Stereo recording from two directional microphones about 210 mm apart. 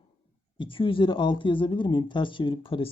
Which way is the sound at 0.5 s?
25° left (ahead or behind).